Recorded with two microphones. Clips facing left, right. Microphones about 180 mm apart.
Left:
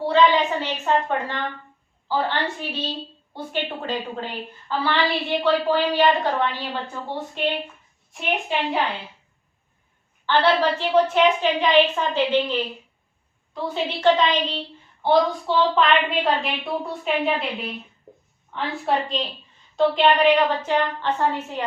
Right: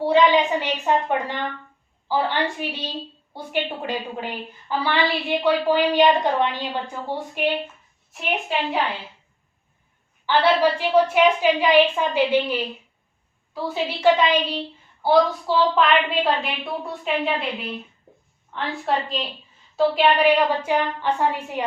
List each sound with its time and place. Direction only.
0.0 s a woman's voice: 15° right (ahead or behind)
8.1 s a woman's voice: centre (ahead or behind)
10.2 s a woman's voice: 10° right (ahead or behind)